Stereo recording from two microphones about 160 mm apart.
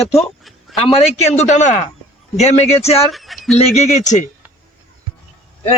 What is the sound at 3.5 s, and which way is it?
Speech, 45° left (ahead or behind).